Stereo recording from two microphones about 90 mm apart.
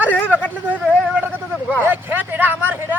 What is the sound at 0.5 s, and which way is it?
Speech, 15° right (ahead or behind).